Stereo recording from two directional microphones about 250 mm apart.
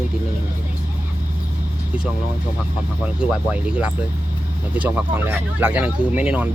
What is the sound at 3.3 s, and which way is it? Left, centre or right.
Speech, centre.